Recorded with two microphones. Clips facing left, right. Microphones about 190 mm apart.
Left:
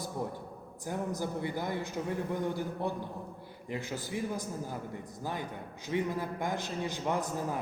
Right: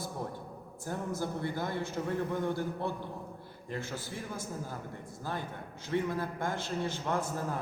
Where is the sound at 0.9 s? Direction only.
15° left (ahead or behind).